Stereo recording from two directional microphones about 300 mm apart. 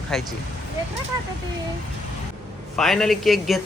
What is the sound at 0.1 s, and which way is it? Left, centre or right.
Speech, centre.